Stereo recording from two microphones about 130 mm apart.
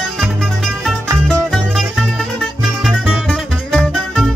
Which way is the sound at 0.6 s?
5° left (ahead or behind).